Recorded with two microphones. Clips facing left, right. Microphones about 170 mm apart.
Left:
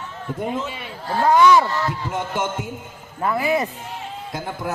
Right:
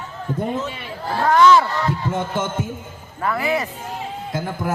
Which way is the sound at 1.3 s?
15° left (ahead or behind).